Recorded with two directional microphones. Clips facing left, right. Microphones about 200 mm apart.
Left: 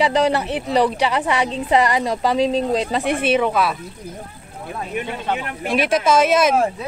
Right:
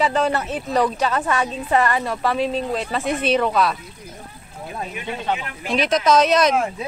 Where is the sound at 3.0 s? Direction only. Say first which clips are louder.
Left 2 dB; 60° left (ahead or behind).